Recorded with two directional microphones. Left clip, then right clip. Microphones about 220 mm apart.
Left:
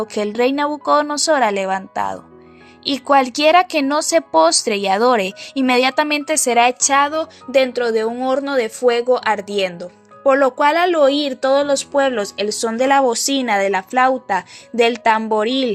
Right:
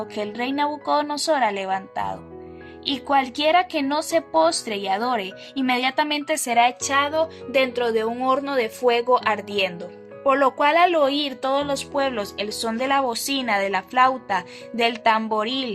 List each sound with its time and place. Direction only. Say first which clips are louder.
0.0 s speech: left 9 dB; 25° left (ahead or behind)